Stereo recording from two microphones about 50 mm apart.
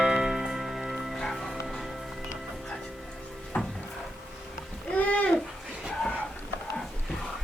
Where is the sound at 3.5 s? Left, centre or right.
Left.